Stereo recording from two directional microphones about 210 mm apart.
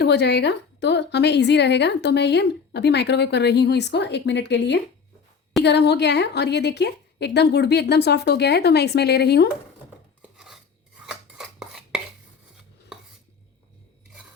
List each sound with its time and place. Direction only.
0.0 s a woman's voice: 55° left (ahead or behind)
10.3 s filing: centre (ahead or behind)
11.0 s cutlery: centre (ahead or behind)